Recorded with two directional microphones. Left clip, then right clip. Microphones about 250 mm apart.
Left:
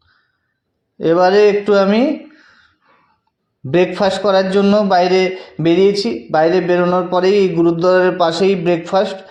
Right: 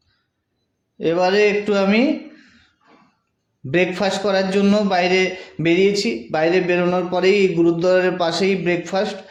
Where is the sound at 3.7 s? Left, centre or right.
Centre.